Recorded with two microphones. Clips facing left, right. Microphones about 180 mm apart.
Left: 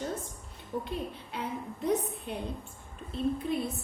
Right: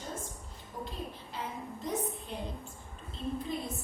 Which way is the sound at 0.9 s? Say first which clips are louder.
Left 5 dB; 65° left (ahead or behind).